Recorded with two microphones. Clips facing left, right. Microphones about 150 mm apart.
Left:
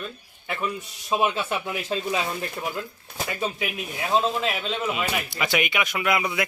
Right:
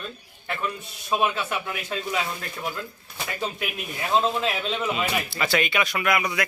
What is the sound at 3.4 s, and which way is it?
A man's voice, 5° left (ahead or behind).